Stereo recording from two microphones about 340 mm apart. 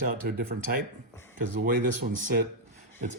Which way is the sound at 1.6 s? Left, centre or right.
Right.